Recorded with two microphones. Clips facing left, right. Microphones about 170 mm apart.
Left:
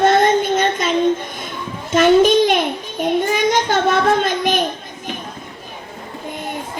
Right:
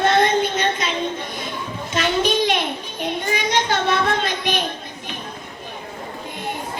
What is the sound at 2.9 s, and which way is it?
Speech, 50° left (ahead or behind).